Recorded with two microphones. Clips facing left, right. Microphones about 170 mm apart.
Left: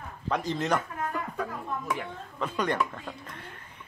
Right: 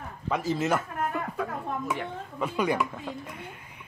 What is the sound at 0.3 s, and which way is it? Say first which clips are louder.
Speech: right 1 dB; 5° right (ahead or behind).